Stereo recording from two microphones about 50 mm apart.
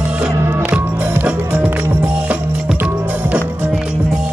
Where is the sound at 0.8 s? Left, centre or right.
Right.